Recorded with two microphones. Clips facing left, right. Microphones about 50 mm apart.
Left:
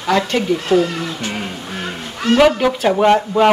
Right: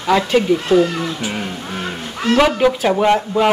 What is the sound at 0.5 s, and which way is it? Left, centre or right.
Speech, centre.